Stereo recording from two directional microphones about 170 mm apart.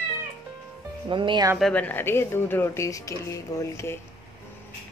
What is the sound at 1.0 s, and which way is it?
Speech, 30° right (ahead or behind).